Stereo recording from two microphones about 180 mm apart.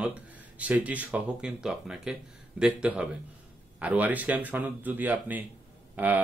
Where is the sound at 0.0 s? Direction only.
5° right (ahead or behind).